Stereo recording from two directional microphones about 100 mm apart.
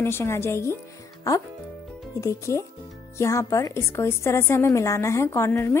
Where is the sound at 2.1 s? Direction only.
30° left (ahead or behind).